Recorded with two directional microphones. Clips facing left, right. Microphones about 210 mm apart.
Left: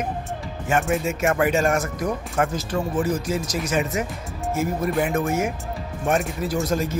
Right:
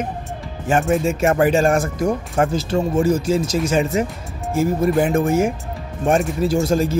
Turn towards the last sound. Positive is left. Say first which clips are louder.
# right 6 dB
turn(degrees=-30)  # may be behind; listen again after turning